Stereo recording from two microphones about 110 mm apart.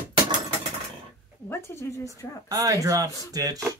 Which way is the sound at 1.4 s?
25° left (ahead or behind).